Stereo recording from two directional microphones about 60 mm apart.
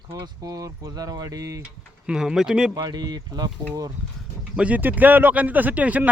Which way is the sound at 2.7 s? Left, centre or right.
Right.